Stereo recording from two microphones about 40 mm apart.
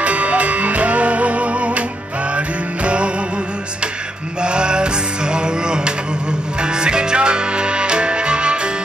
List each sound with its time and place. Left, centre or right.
0.0 s music: right
4.4 s music: right